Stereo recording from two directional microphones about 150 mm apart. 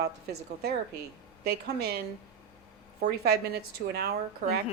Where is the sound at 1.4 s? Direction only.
90° right.